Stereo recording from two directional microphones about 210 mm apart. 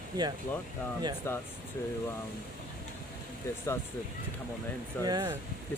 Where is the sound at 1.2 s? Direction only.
15° left (ahead or behind).